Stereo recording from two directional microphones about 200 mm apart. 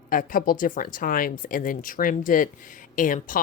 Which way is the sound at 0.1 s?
40° left (ahead or behind).